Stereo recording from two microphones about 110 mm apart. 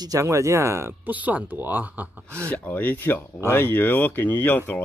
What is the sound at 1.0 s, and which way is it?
Speech, 15° right (ahead or behind).